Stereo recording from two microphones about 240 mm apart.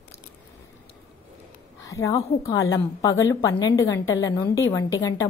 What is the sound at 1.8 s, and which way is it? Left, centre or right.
Speech, centre.